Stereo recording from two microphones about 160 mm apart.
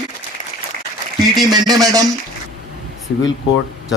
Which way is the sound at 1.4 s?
25° right (ahead or behind).